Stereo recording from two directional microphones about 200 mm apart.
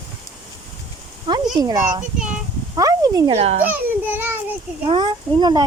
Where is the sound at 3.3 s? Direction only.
30° right (ahead or behind).